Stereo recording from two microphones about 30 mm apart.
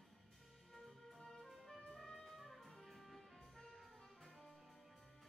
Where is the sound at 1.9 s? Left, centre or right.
Left.